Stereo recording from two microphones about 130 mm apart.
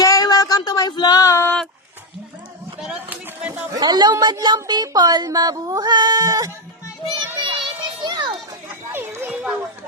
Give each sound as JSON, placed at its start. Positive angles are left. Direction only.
{"t": 0.0, "sound": "female singing", "side_deg": 30}
{"t": 2.8, "sound": "a sound", "side_deg": -10}
{"t": 3.8, "sound": "speech", "side_deg": -35}
{"t": 7.4, "sound": "children playing", "side_deg": -35}
{"t": 8.9, "sound": "children playing", "side_deg": -15}